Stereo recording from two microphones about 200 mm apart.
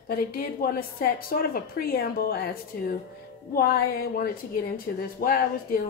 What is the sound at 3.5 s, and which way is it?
A woman's voice, 50° left (ahead or behind).